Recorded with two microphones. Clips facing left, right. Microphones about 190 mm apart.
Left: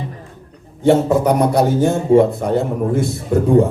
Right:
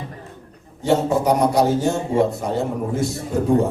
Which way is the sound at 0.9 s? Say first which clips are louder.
Left 4 dB; 55° left (ahead or behind).